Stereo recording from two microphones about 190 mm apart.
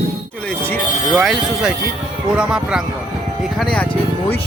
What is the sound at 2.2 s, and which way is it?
Speech, 5° right (ahead or behind).